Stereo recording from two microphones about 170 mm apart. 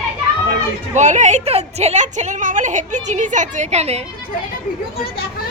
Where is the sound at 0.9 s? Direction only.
45° right (ahead or behind).